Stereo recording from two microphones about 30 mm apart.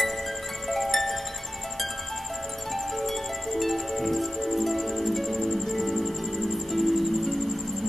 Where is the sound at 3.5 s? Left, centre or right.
Centre.